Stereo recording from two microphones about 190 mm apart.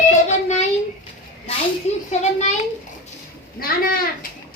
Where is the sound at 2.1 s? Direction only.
35° left (ahead or behind).